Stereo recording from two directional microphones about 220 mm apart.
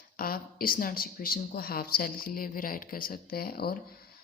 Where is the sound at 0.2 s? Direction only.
40° left (ahead or behind).